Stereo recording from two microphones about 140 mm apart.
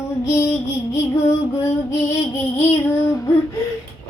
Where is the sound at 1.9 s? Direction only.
20° left (ahead or behind).